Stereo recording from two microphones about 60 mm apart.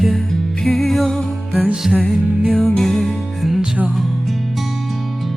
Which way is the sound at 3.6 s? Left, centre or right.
Right.